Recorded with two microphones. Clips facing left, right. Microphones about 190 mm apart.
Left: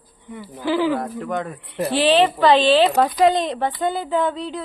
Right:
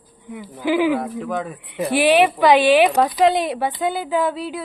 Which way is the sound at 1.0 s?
Centre (ahead or behind).